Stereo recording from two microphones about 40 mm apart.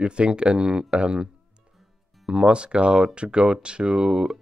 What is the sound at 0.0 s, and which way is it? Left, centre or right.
Speech, right.